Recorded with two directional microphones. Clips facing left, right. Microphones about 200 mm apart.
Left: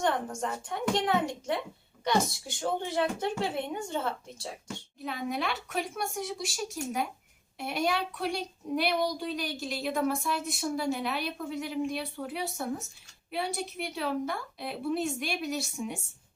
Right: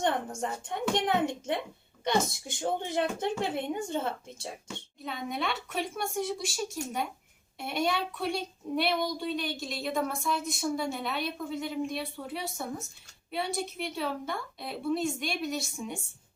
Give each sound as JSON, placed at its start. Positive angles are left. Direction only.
{"t": 0.0, "sound": "speech", "side_deg": -20}
{"t": 5.0, "sound": "a woman's voice", "side_deg": 0}